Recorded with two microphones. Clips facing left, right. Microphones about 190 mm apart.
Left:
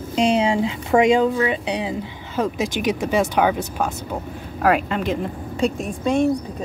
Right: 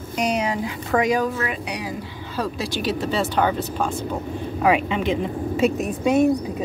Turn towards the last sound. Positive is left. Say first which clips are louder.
# right 2 dB
turn(degrees=-5)  # may be behind; listen again after turning